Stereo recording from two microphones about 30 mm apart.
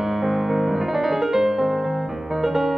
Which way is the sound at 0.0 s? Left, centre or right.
Centre.